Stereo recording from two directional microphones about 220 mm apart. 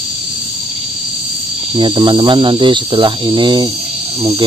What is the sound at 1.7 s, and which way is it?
Speech, 20° right (ahead or behind).